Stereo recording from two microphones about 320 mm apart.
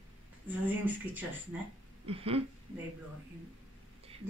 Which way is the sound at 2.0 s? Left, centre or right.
Centre.